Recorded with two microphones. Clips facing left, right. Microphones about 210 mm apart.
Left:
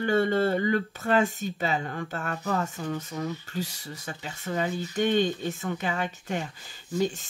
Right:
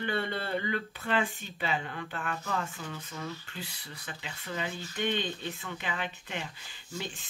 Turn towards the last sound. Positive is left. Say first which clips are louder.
# left 12 dB
turn(degrees=40)  # may be behind; listen again after turning